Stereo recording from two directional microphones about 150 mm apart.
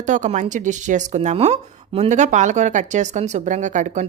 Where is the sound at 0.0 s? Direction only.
55° right (ahead or behind).